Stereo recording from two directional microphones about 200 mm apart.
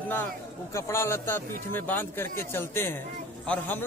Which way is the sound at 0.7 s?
15° left (ahead or behind).